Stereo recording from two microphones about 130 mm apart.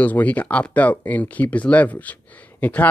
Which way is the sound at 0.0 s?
10° left (ahead or behind).